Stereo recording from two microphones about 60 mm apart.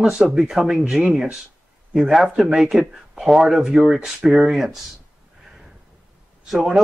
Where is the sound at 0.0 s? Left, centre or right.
Centre.